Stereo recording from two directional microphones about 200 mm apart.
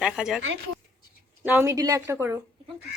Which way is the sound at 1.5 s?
10° right (ahead or behind).